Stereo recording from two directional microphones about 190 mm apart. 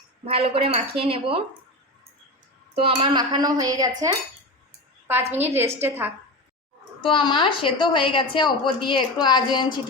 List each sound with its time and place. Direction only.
0.3 s a woman's voice: 30° right (ahead or behind)
2.7 s a woman's voice: 30° right (ahead or behind)
5.5 s a woman's voice: 15° right (ahead or behind)
7.0 s a woman's voice: 25° left (ahead or behind)